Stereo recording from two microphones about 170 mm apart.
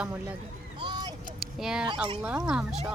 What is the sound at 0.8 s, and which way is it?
Vehicle, 25° right (ahead or behind).